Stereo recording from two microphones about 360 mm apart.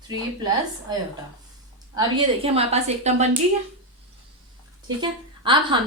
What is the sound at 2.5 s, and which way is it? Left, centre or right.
Speech, centre.